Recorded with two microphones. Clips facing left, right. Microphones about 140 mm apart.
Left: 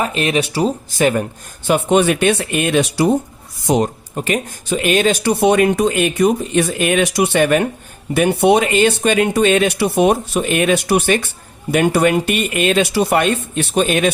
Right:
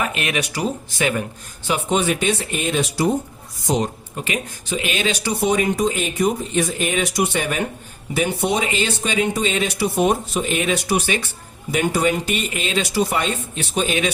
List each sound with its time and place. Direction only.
0.0 s speech: 30° left (ahead or behind)
1.6 s speech: 60° left (ahead or behind)
4.1 s speech: 45° left (ahead or behind)